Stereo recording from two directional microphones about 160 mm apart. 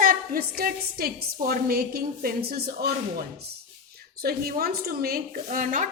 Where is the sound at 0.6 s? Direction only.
70° right (ahead or behind).